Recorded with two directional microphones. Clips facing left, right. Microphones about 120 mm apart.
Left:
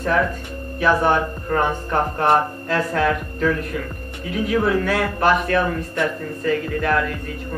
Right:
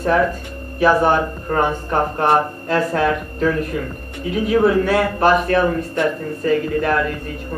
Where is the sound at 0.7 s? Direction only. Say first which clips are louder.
Right 3 dB; 15° right (ahead or behind).